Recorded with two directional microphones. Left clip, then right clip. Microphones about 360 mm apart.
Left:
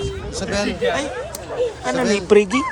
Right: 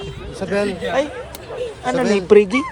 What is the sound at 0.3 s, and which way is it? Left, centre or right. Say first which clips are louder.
Speech: right 3 dB; centre.